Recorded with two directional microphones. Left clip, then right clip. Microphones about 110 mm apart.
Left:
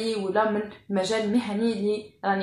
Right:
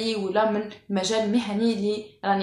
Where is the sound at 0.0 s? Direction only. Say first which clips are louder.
Right 1 dB; 10° right (ahead or behind).